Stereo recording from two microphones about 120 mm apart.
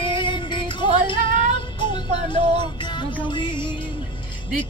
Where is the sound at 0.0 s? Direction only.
40° left (ahead or behind).